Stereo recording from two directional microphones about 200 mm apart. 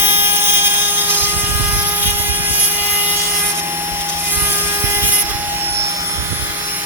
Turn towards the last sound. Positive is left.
turn(degrees=-10)  # may be behind; listen again after turning